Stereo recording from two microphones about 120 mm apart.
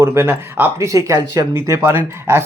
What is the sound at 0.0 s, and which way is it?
Speech, 20° right (ahead or behind).